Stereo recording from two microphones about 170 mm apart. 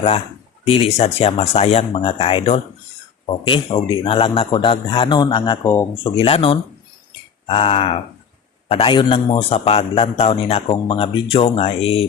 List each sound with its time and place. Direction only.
0.7 s a man's voice: 35° left (ahead or behind)
5.6 s speech: 15° left (ahead or behind)
6.0 s a man's voice: 30° left (ahead or behind)